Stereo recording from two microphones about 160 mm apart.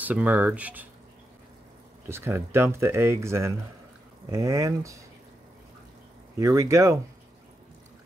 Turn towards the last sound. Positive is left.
turn(degrees=-20)  # may be behind; listen again after turning